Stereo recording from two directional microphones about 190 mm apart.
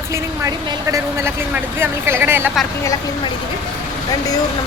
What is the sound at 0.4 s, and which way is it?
Speech, 15° right (ahead or behind).